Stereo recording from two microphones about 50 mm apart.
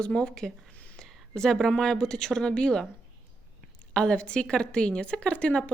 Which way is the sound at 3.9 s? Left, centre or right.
Left.